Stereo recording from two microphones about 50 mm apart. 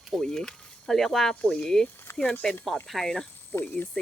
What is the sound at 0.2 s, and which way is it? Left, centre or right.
Speech, centre.